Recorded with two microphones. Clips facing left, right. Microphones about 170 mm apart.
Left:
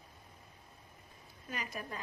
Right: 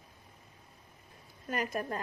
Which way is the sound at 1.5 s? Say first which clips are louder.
Right 8 dB; 50° right (ahead or behind).